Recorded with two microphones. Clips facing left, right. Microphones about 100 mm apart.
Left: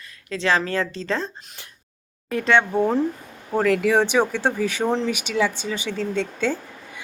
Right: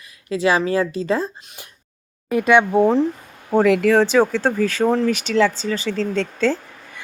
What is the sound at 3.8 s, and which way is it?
Speech, 15° left (ahead or behind).